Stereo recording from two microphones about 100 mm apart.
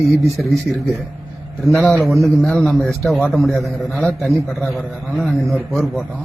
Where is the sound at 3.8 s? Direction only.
10° left (ahead or behind).